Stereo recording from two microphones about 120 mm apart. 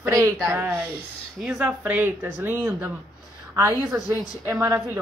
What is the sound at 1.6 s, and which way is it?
A woman's voice, 15° right (ahead or behind).